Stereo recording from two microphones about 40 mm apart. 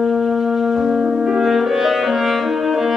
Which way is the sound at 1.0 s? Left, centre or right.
Centre.